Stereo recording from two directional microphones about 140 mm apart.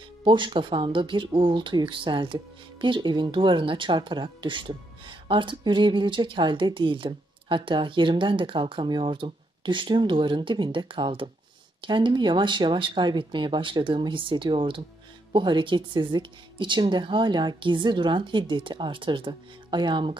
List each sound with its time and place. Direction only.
0.2 s speech: 35° right (ahead or behind)